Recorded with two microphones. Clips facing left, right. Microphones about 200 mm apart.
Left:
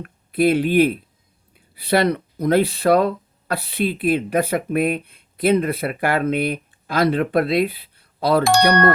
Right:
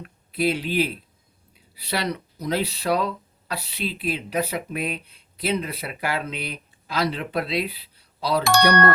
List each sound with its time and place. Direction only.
0.0 s speech: 55° left (ahead or behind)